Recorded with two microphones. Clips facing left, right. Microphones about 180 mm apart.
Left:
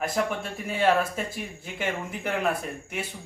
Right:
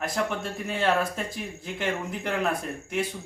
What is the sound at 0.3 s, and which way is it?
Speech, 5° left (ahead or behind).